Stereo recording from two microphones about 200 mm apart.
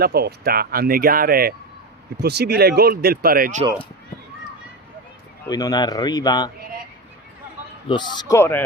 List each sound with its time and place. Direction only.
0.0 s speech: 50° right (ahead or behind)
5.5 s a man's voice: 20° left (ahead or behind)
7.9 s a man's voice: 20° left (ahead or behind)